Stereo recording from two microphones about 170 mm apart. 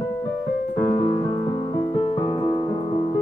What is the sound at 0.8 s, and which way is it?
Music, 25° left (ahead or behind).